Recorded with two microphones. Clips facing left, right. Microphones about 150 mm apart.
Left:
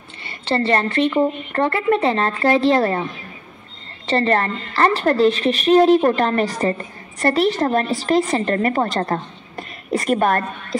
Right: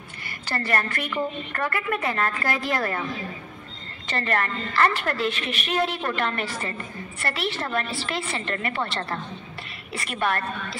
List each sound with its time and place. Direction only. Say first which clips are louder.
0.2 s speech: left 10 dB; 25° left (ahead or behind)
4.1 s a woman's voice: left 8 dB; 30° left (ahead or behind)